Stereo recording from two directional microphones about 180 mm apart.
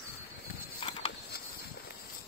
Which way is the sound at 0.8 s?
30° left (ahead or behind).